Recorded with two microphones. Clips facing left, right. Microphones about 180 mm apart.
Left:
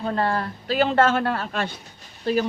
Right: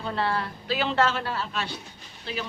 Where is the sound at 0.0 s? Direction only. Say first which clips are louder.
Left 4 dB; 45° left (ahead or behind).